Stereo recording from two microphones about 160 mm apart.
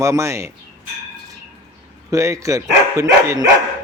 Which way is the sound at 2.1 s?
20° right (ahead or behind).